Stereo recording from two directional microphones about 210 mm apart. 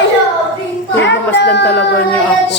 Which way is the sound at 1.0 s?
55° left (ahead or behind).